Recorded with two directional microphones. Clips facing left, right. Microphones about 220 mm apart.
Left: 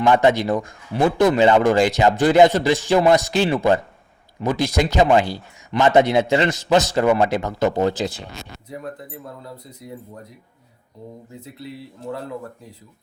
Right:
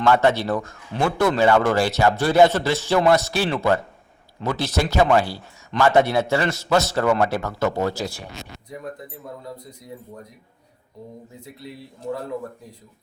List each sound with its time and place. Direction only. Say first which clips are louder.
0.0 s speech: left 2 dB; 15° left (ahead or behind)